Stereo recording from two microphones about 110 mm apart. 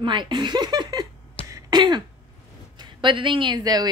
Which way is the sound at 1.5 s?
40° right (ahead or behind).